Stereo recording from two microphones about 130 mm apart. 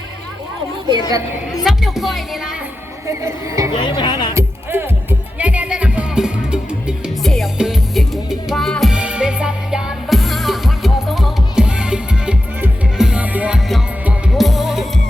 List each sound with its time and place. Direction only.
1.6 s music: centre (ahead or behind)
3.1 s speech: 25° right (ahead or behind)
3.7 s speech: 35° left (ahead or behind)
4.4 s music: 15° right (ahead or behind)
14.3 s music: centre (ahead or behind)